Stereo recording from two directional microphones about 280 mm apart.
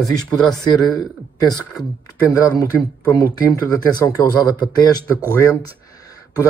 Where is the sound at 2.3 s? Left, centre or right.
Centre.